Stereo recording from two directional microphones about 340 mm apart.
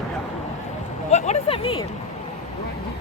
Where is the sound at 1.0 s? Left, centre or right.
Centre.